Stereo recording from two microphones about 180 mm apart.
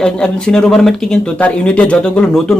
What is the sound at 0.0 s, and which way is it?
Speech, 5° left (ahead or behind).